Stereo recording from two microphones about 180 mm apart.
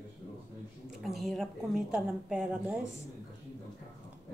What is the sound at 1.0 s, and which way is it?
A woman's voice, centre (ahead or behind).